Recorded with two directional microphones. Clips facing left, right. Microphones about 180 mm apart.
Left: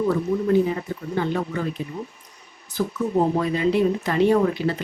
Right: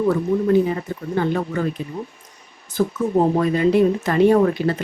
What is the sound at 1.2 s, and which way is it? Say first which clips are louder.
Speech: right 3 dB; 50° right (ahead or behind).